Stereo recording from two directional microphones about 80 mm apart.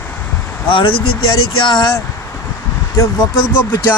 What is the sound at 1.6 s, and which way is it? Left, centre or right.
Speech, left.